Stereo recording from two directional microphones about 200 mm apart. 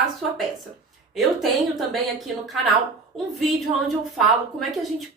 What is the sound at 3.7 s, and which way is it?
Speech, 15° right (ahead or behind).